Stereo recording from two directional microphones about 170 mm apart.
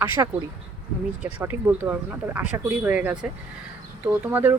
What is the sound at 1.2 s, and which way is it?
Speech, 10° right (ahead or behind).